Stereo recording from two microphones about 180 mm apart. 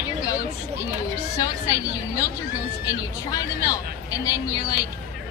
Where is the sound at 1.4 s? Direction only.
20° left (ahead or behind).